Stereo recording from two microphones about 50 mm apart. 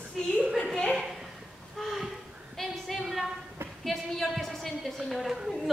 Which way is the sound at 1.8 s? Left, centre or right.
Centre.